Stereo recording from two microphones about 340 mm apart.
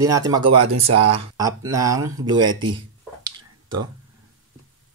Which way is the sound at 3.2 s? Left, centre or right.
Centre.